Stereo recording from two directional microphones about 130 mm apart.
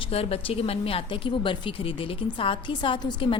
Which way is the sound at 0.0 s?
50° left (ahead or behind).